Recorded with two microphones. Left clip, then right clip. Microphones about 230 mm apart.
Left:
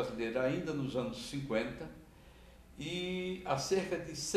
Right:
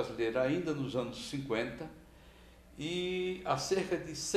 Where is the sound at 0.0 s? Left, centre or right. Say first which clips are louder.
Right 2 dB; right.